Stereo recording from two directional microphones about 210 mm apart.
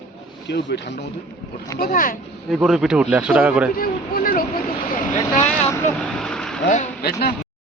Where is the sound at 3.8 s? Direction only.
45° left (ahead or behind).